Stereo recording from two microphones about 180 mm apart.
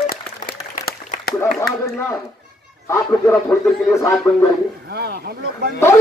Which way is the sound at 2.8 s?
15° left (ahead or behind).